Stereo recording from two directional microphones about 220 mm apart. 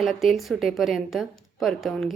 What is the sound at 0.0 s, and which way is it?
A woman's voice, centre (ahead or behind).